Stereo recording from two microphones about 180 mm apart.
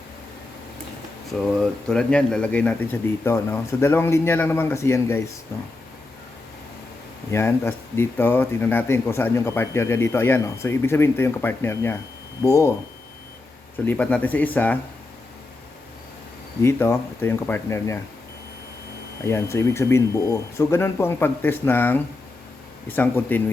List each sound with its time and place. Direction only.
1.4 s speech: 5° left (ahead or behind)
7.3 s speech: 15° left (ahead or behind)
13.8 s speech: 5° left (ahead or behind)
16.6 s speech: 15° left (ahead or behind)
19.2 s speech: 15° left (ahead or behind)